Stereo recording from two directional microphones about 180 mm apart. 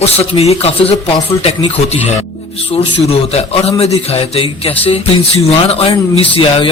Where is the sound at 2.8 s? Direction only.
35° left (ahead or behind).